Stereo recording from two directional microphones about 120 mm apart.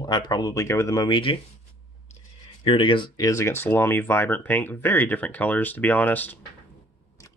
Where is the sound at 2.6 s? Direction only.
50° left (ahead or behind); by 6.4 s 15° left (ahead or behind).